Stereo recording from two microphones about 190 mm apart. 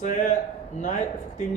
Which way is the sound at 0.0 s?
40° left (ahead or behind).